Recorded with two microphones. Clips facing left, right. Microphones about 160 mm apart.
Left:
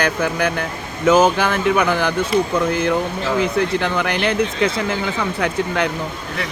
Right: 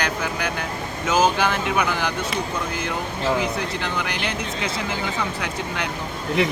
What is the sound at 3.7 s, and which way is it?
Speech, 55° left (ahead or behind).